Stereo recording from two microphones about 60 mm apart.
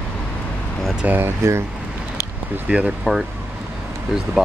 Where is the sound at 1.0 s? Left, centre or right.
Right.